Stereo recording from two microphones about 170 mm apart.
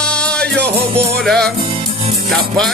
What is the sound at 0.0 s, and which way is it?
Music, 5° left (ahead or behind).